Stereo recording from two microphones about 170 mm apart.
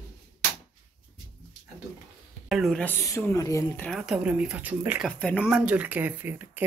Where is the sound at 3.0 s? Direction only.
15° left (ahead or behind).